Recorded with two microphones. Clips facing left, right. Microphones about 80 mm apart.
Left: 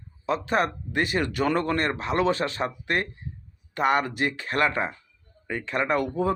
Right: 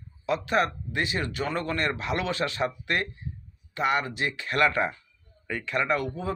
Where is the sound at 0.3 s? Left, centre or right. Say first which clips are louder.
Left 1 dB; left.